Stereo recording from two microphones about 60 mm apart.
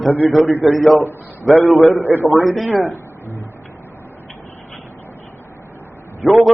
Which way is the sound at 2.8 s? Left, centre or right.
Left.